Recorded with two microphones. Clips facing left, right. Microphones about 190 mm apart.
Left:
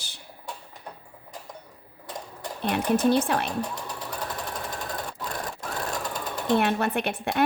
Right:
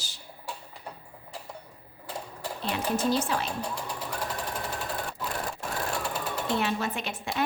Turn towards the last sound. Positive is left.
turn(degrees=60)  # may be behind; listen again after turning